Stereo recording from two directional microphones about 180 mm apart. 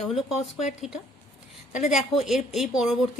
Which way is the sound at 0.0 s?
Centre (ahead or behind).